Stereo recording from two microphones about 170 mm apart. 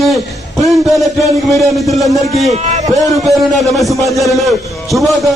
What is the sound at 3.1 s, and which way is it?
A man's voice, centre (ahead or behind).